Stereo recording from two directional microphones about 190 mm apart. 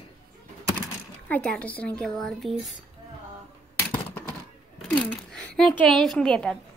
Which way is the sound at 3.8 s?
10° left (ahead or behind).